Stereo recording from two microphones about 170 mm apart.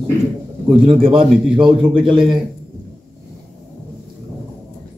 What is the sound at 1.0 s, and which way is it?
A man's voice, 30° right (ahead or behind).